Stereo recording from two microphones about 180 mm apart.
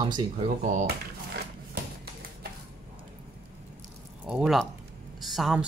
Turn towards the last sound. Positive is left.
turn(degrees=0)  # may be behind; listen again after turning